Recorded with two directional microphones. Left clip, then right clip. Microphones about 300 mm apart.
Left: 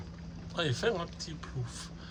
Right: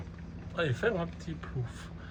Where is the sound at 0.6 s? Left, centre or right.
Centre.